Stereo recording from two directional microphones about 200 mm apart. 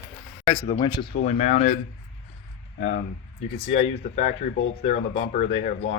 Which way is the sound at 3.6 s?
30° left (ahead or behind).